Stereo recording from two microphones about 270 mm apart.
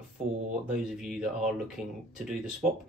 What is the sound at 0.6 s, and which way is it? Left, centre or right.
Speech, centre.